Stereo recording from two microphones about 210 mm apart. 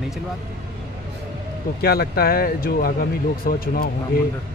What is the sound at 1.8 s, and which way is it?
Speech, 45° left (ahead or behind).